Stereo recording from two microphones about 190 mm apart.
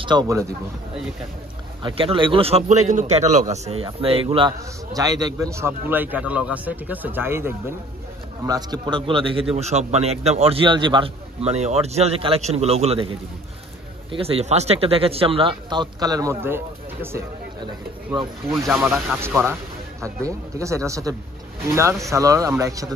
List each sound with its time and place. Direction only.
0.0 s speech: 25° right (ahead or behind)
1.8 s a man's voice: 25° right (ahead or behind)
14.1 s speech: 30° right (ahead or behind); by 17.2 s 10° right (ahead or behind)
19.0 s a man's voice: 10° right (ahead or behind)